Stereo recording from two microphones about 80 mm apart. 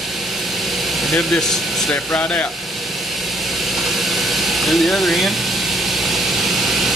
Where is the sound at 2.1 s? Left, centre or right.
Centre.